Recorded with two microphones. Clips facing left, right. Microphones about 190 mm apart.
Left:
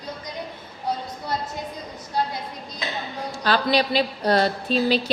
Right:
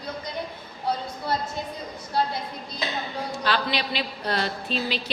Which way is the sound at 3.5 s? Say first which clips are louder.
Left 7 dB; 40° left (ahead or behind).